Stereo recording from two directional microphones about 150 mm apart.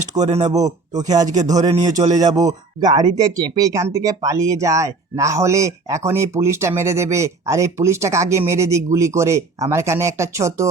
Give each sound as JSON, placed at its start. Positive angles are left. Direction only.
{"t": 0.2, "sound": "speech", "side_deg": -45}
{"t": 0.4, "sound": "a man's voice", "side_deg": -25}